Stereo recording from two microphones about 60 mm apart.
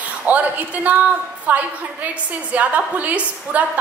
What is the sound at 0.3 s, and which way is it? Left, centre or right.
A woman's voice, right.